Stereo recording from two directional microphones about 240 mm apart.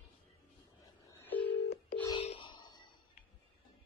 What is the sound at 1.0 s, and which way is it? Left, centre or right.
Telephone dialing, centre.